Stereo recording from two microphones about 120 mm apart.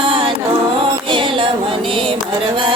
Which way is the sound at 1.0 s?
45° right (ahead or behind).